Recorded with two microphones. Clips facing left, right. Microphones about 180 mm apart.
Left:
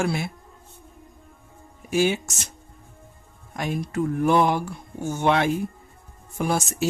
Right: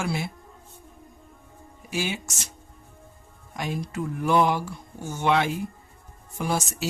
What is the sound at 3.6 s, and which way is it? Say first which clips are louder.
Speech: left 4 dB; 50° left (ahead or behind).